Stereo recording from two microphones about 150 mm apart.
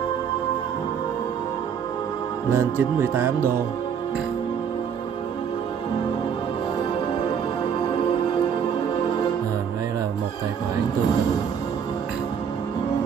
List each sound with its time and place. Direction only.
2.5 s music: 15° right (ahead or behind)